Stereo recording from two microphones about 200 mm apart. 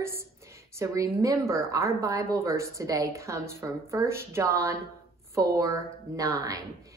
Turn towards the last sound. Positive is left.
turn(degrees=-15)  # may be behind; listen again after turning